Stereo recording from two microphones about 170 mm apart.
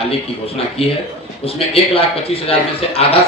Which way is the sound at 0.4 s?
35° left (ahead or behind).